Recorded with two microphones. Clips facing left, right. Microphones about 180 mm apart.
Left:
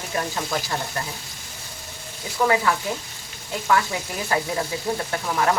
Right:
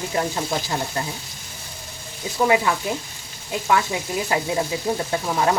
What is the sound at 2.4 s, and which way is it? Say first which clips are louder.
Speech: right 1 dB; 20° right (ahead or behind).